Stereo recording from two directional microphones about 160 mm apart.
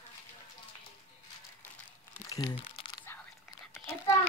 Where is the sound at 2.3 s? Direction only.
25° left (ahead or behind).